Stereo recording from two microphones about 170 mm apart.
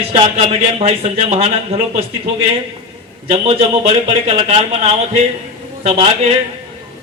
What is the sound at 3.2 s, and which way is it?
A man's voice, 35° right (ahead or behind).